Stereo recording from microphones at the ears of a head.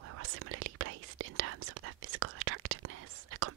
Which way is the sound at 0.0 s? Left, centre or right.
Right.